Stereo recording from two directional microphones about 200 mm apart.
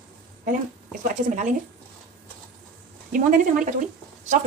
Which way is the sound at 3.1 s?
40° right (ahead or behind).